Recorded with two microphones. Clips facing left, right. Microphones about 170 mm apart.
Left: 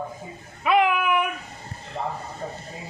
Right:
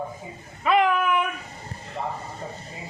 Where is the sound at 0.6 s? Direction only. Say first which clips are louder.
Even; 10° left (ahead or behind).